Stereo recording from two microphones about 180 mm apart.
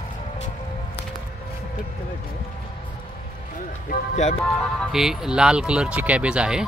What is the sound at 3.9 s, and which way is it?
Music, 40° left (ahead or behind).